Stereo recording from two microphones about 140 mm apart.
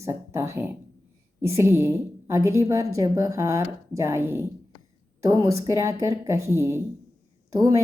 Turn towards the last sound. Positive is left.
turn(degrees=-25)  # may be behind; listen again after turning